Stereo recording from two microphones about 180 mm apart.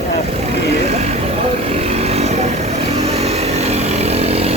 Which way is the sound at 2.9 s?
35° right (ahead or behind).